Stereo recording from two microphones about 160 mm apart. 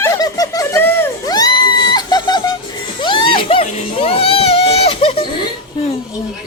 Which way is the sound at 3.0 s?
30° left (ahead or behind).